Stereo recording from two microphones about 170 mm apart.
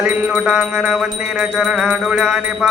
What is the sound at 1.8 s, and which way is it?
Mantra, 5° right (ahead or behind).